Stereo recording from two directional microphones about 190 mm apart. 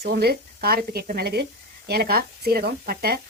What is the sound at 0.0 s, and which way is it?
Speech, 55° right (ahead or behind).